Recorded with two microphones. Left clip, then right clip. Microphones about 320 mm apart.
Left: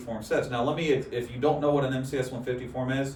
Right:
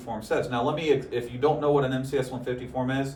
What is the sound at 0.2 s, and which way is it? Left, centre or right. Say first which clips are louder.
Speech: right 1 dB; centre.